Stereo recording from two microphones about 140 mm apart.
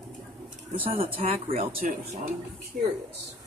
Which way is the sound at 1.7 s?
50° right (ahead or behind).